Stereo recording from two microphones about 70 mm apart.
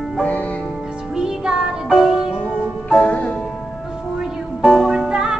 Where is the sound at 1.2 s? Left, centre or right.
Centre.